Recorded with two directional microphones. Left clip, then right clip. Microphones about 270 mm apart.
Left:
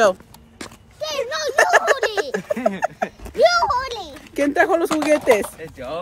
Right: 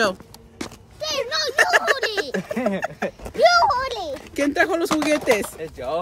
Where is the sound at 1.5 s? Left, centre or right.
Centre.